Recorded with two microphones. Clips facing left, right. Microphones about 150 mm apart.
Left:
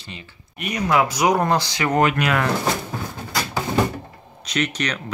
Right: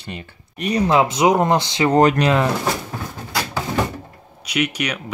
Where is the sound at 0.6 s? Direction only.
30° right (ahead or behind).